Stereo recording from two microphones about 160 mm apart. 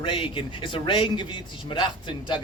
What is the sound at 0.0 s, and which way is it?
A man's voice, 30° left (ahead or behind).